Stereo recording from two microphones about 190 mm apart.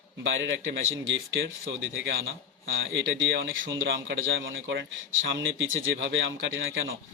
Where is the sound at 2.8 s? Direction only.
75° right (ahead or behind).